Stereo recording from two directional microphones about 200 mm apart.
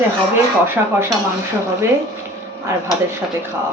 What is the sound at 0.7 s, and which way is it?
Speech, 10° right (ahead or behind).